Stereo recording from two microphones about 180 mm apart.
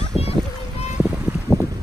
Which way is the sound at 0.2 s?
35° left (ahead or behind).